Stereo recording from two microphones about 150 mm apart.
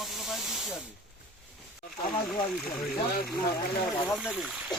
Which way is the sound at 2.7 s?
Centre (ahead or behind).